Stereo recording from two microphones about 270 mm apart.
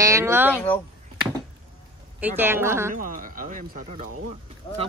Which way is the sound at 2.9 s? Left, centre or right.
Right.